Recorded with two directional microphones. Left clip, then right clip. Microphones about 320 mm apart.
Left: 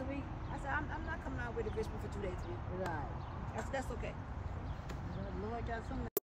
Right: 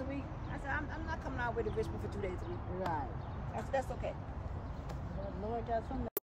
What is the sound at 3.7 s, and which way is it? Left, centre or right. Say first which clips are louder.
Speech: right 6 dB; right.